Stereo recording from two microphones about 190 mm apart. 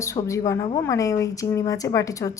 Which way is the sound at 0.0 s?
15° left (ahead or behind).